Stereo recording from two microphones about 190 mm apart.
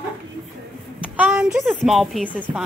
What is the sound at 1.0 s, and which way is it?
A woman's voice, 5° right (ahead or behind).